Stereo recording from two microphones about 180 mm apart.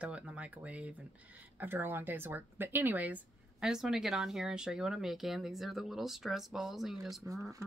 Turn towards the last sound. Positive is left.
turn(degrees=-15)  # may be behind; listen again after turning